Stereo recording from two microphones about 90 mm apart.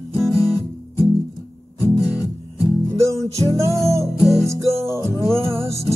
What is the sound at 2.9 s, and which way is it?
Music, 35° right (ahead or behind).